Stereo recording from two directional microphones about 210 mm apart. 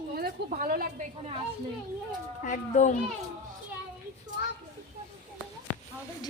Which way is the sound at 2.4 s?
35° left (ahead or behind).